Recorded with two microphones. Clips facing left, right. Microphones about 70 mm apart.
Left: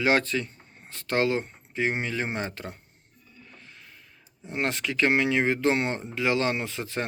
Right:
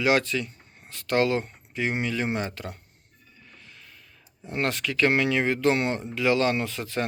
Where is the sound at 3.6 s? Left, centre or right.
Left.